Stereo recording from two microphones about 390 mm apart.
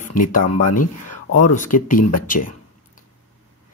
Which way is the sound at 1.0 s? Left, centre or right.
Left.